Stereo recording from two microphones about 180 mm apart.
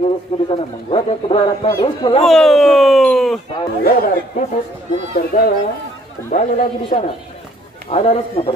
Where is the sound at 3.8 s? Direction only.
55° left (ahead or behind).